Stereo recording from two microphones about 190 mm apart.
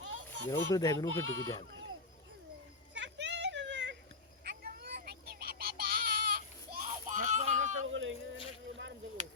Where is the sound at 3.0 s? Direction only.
70° right (ahead or behind).